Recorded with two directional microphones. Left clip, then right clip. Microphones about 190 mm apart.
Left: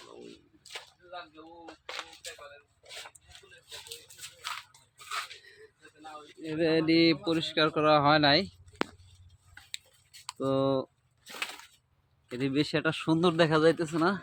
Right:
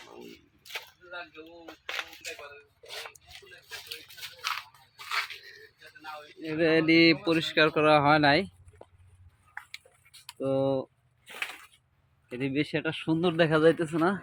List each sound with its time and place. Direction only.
1.6 s single-lens reflex camera: 20° left (ahead or behind)
6.4 s speech: centre (ahead or behind)
10.4 s speech: 20° left (ahead or behind)
12.3 s speech: 15° left (ahead or behind)
13.3 s speech: 5° left (ahead or behind)